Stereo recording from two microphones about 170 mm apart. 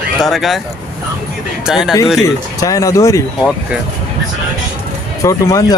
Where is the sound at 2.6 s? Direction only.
20° left (ahead or behind).